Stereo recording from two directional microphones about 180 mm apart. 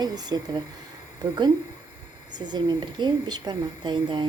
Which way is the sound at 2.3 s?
25° right (ahead or behind).